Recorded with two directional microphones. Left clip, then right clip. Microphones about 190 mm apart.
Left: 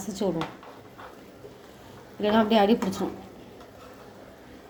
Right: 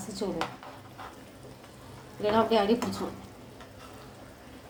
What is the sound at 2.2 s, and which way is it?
Speech, 40° left (ahead or behind).